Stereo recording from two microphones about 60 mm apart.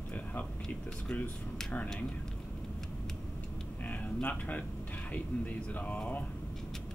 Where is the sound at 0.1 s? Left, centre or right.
Left.